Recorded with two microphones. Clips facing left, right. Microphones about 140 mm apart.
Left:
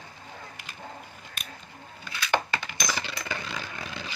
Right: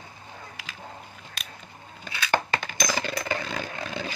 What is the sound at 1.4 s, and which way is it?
Scissors, 90° right.